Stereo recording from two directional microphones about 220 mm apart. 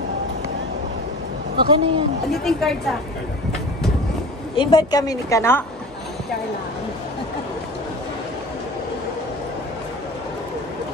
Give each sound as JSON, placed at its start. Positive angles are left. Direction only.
{"t": 1.7, "sound": "speech", "side_deg": -25}
{"t": 2.3, "sound": "a woman's voice", "side_deg": 0}
{"t": 4.6, "sound": "a woman's voice", "side_deg": 20}